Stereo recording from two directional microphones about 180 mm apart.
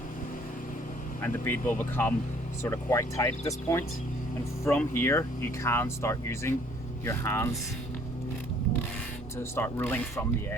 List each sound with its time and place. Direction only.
1.2 s speech: 10° left (ahead or behind)
9.4 s speech: 15° left (ahead or behind)